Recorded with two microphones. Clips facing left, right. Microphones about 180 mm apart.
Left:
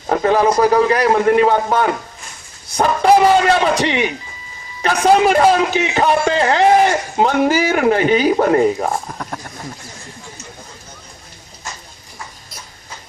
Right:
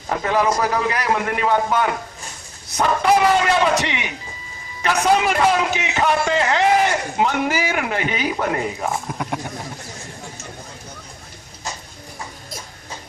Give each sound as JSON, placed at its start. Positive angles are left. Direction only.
{"t": 0.1, "sound": "a man's voice", "side_deg": 35}